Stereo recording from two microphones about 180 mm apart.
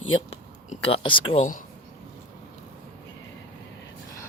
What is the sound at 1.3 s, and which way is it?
Speech, 45° left (ahead or behind).